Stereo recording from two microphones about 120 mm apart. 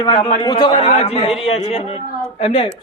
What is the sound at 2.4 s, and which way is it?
Speech, 45° left (ahead or behind).